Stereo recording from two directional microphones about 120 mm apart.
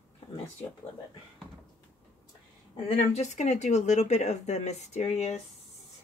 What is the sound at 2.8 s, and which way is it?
Speech, 60° left (ahead or behind).